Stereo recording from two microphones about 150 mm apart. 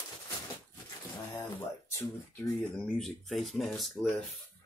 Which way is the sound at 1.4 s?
15° left (ahead or behind).